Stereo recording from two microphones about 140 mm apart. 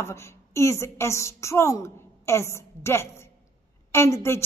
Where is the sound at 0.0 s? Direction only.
20° left (ahead or behind).